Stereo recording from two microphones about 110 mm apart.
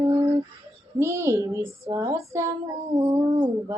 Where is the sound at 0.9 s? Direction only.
25° right (ahead or behind).